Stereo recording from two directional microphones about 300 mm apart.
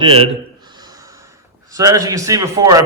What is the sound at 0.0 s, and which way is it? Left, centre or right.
Speech, centre.